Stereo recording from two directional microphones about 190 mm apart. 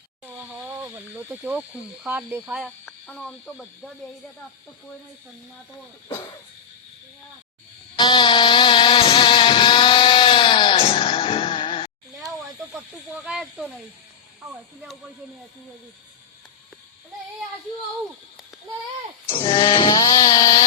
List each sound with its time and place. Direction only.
0.3 s speech: 10° right (ahead or behind)
2.6 s speech: 5° left (ahead or behind)
6.1 s speech: 25° left (ahead or behind)
7.9 s a sound: 25° left (ahead or behind)
13.2 s speech: centre (ahead or behind)
19.3 s grunt: 25° left (ahead or behind)